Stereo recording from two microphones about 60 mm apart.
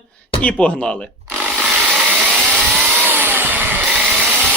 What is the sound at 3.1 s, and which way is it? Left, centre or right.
Vehicle, right.